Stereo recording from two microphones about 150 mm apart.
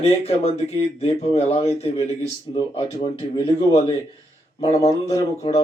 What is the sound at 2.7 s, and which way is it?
Speech, 30° left (ahead or behind).